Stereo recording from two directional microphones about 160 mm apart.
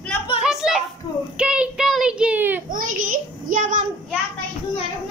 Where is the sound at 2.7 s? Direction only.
60° right (ahead or behind).